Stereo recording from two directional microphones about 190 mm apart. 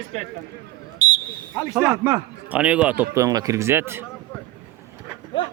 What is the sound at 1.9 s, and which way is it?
Speech, 20° right (ahead or behind).